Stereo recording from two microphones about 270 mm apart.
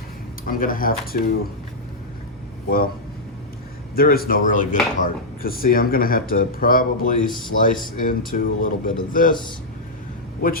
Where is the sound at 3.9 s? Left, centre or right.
Left.